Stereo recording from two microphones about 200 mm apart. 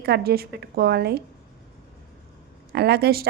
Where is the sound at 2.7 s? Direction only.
55° right (ahead or behind).